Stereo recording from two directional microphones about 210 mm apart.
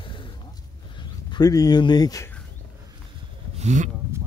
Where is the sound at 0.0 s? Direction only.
20° left (ahead or behind).